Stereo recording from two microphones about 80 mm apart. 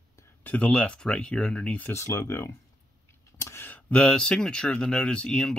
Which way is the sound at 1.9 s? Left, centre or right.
Left.